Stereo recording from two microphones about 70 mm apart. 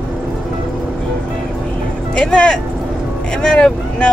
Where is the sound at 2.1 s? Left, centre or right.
Centre.